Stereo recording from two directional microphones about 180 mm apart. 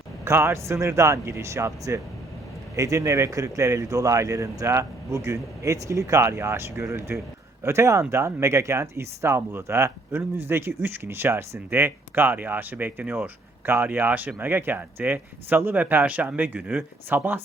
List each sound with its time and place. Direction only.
0.3 s speech: 15° right (ahead or behind)